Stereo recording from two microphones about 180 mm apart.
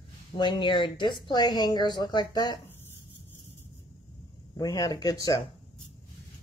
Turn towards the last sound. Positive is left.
turn(degrees=20)  # may be behind; listen again after turning